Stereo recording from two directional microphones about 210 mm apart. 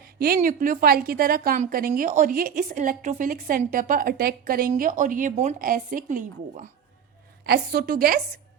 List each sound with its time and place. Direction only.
0.0 s a woman's voice: 45° right (ahead or behind)
7.4 s a woman's voice: 50° right (ahead or behind)